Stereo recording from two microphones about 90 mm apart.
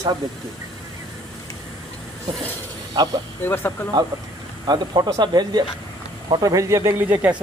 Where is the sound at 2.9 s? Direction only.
50° right (ahead or behind).